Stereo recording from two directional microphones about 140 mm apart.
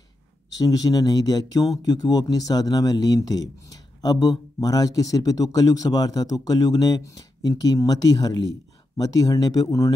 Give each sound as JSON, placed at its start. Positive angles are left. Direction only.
{"t": 0.5, "sound": "speech", "side_deg": 25}